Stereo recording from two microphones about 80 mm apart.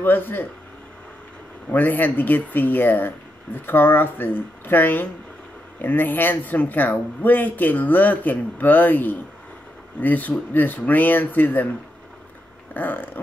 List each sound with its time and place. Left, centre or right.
0.0 s speech: left
1.7 s speech: left
12.7 s speech: left